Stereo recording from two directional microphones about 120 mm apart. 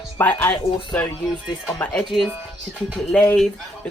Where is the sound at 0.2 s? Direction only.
15° left (ahead or behind).